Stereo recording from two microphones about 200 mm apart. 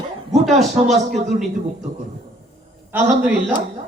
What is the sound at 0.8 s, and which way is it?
Speech, 35° right (ahead or behind).